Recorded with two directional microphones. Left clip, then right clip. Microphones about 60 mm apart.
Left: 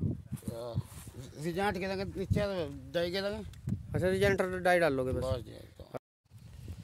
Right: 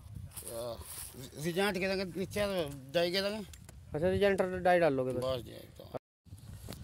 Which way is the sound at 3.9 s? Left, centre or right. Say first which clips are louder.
Even; left.